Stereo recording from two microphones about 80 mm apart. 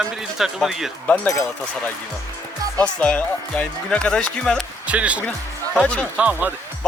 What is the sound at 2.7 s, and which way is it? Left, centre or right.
Speech, centre.